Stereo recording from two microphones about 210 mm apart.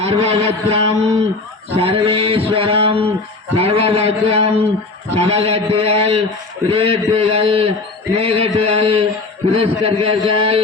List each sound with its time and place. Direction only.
0.0 s mantra: 30° right (ahead or behind)